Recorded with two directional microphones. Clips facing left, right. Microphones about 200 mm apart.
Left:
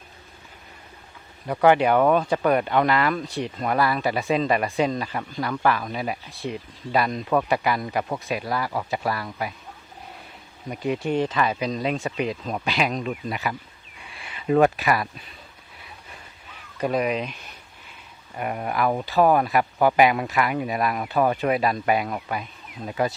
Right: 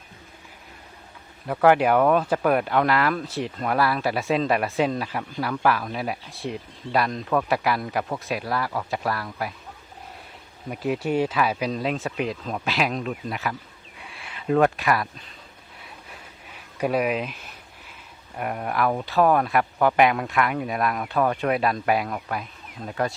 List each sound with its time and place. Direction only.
1.5 s speech: centre (ahead or behind)
10.7 s speech: 5° right (ahead or behind)
14.0 s a sound: centre (ahead or behind)
16.7 s speech: 10° right (ahead or behind)